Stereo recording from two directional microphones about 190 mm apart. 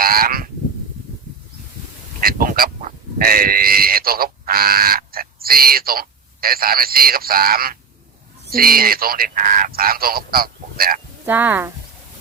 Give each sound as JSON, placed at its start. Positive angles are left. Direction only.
{"t": 0.0, "sound": "goose", "side_deg": -50}
{"t": 2.2, "sound": "speech", "side_deg": -50}
{"t": 11.3, "sound": "speech", "side_deg": -10}